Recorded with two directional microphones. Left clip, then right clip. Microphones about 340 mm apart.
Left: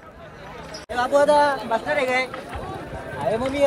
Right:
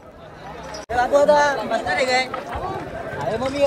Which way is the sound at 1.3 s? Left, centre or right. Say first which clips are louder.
Right 1 dB; centre.